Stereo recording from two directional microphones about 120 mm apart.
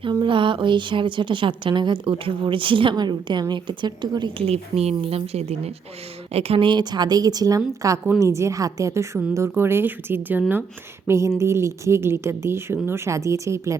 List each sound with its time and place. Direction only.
0.0 s a woman's voice: 40° right (ahead or behind)
4.4 s a woman's voice: 60° right (ahead or behind); by 13.7 s 25° right (ahead or behind)